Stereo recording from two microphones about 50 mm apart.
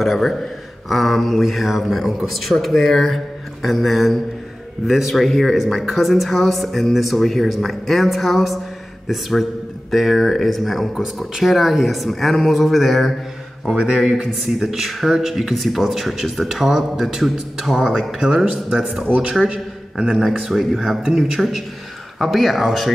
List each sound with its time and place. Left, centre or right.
0.0 s a man's voice: centre
19.0 s a man's voice: right
20.1 s a man's voice: centre